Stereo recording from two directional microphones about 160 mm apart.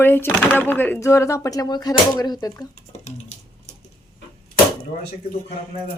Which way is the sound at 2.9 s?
45° left (ahead or behind).